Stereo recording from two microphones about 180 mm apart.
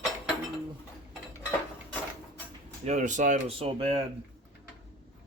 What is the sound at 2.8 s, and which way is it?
Speech, 40° right (ahead or behind).